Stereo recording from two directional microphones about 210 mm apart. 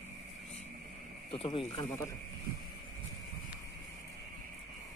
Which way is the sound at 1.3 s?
25° left (ahead or behind).